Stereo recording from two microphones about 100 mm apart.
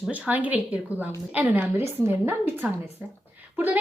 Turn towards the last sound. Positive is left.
turn(degrees=-15)  # may be behind; listen again after turning